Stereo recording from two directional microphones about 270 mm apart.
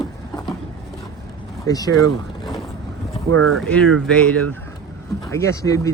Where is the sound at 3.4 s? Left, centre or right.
Right.